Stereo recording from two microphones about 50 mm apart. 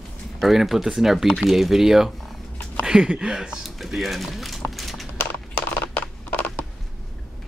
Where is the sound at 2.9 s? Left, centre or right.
Centre.